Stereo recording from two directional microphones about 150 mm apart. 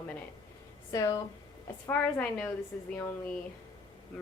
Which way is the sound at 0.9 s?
25° left (ahead or behind).